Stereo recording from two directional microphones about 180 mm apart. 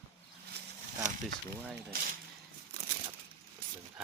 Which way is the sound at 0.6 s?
65° right (ahead or behind).